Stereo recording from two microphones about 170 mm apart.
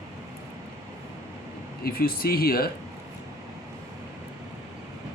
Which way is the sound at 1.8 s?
60° left (ahead or behind).